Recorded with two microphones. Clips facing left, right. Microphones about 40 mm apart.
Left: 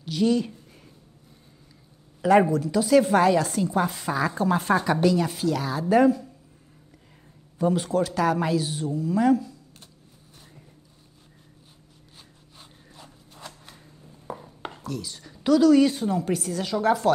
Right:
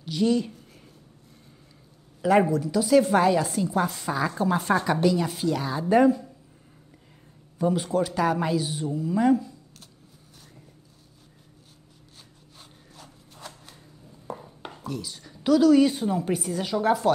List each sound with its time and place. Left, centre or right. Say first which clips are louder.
0.0 s a woman's voice: left 1 dB; centre
2.2 s a woman's voice: left 2 dB; centre
7.5 s a woman's voice: left 1 dB; centre
12.5 s a sound: left 1 dB; centre
14.3 s chopping: even; centre
14.8 s a woman's voice: right 1 dB; centre